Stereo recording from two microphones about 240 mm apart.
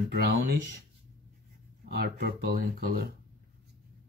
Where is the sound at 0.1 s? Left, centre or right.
Right.